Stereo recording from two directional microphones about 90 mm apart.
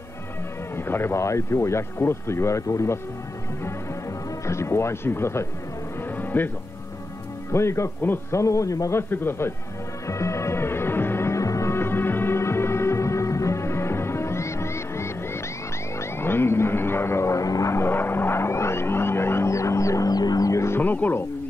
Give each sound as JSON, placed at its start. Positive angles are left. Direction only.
{"t": 0.7, "sound": "speech", "side_deg": 25}
{"t": 4.5, "sound": "speech", "side_deg": 30}
{"t": 6.1, "sound": "music", "side_deg": 20}
{"t": 7.5, "sound": "speech", "side_deg": 30}
{"t": 9.1, "sound": "speech", "side_deg": 25}
{"t": 10.0, "sound": "music", "side_deg": 35}
{"t": 16.0, "sound": "a sound", "side_deg": 25}
{"t": 20.8, "sound": "speech", "side_deg": 20}